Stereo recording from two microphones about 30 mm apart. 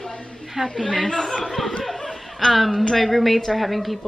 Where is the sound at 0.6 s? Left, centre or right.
Right.